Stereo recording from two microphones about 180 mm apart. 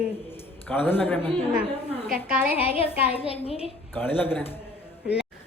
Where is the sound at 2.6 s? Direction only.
35° left (ahead or behind).